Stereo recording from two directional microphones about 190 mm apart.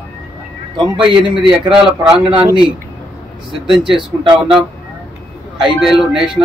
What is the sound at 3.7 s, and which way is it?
Speech, 25° right (ahead or behind).